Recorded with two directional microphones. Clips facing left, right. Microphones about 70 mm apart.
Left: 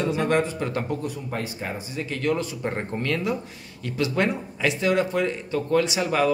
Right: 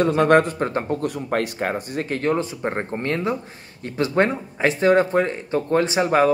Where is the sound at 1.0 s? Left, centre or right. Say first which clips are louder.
Right 7 dB; right.